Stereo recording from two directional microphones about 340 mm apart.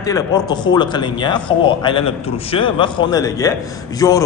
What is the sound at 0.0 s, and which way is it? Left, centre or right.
A man's voice, centre.